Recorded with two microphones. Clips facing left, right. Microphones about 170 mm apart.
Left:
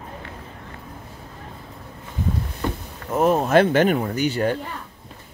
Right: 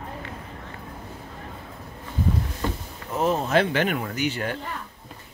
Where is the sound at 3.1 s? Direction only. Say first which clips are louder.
Left 5 dB; 50° left (ahead or behind); by 4.6 s 35° left (ahead or behind).